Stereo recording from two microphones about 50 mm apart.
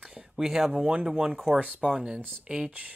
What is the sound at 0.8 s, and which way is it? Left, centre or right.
Speech, right.